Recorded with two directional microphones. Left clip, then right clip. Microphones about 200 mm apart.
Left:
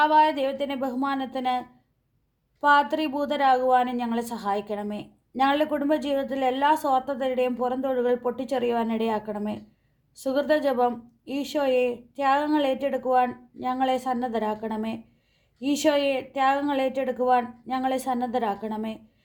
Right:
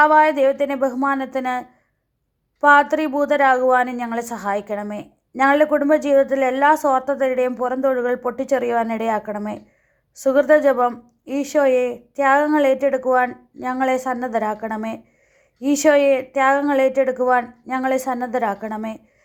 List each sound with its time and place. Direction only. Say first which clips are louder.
0.0 s a woman's voice: right 7 dB; 25° right (ahead or behind)